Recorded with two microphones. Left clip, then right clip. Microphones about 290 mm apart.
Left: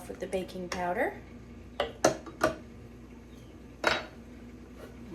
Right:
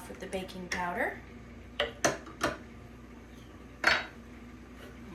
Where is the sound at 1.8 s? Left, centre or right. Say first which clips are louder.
Left 2 dB; centre.